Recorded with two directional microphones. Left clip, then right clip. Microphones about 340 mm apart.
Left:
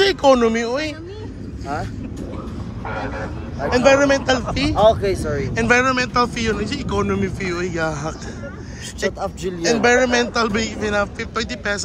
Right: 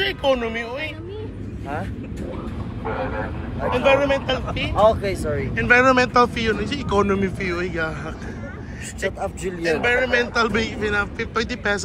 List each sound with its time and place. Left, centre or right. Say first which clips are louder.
0.0 s speech: left 7 dB; left
3.7 s speech: left 4 dB; left
5.5 s speech: right 1 dB; centre
9.6 s a man's voice: left 4 dB; centre